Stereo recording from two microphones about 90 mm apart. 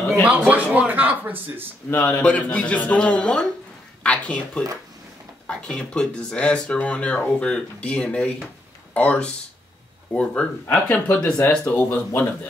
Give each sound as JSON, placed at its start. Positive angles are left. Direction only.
{"t": 0.5, "sound": "speech", "side_deg": -15}
{"t": 1.9, "sound": "speech", "side_deg": 25}
{"t": 11.6, "sound": "speech", "side_deg": 20}